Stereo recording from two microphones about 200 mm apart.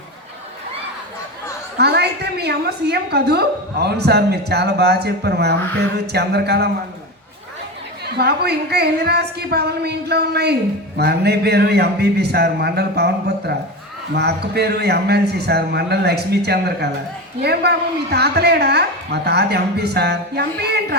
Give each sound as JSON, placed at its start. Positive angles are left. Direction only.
{"t": 1.8, "sound": "a woman's voice", "side_deg": -55}
{"t": 8.0, "sound": "a woman's voice", "side_deg": -55}